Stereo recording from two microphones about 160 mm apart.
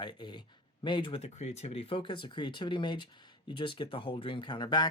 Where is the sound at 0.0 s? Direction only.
30° left (ahead or behind).